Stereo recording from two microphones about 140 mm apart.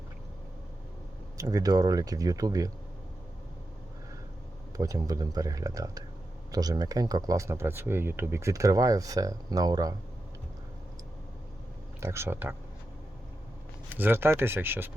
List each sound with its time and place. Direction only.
1.4 s speech: 25° right (ahead or behind)
4.8 s speech: 25° right (ahead or behind)
11.9 s speech: 20° right (ahead or behind)
13.9 s speech: 15° right (ahead or behind)